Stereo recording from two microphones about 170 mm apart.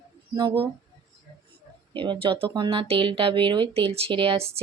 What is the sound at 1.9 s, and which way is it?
Speech, 30° right (ahead or behind).